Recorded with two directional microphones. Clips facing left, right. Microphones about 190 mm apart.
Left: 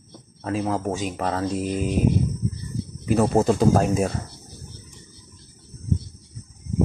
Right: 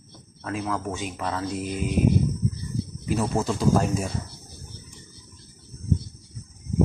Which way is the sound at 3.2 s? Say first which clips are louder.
Left 7 dB; 50° left (ahead or behind).